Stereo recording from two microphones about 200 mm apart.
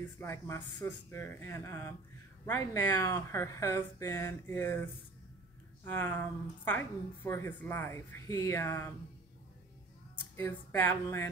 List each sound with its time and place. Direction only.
0.0 s speech: 10° left (ahead or behind)
5.9 s speech: 10° left (ahead or behind)
10.3 s speech: 10° left (ahead or behind)